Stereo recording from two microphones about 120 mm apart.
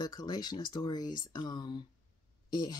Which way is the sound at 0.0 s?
35° left (ahead or behind).